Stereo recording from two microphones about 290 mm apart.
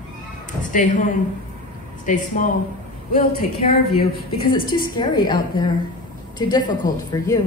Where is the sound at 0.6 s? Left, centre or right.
Left.